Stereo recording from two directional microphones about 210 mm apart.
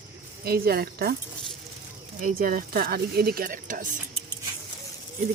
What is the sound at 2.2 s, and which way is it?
Speech, 40° right (ahead or behind).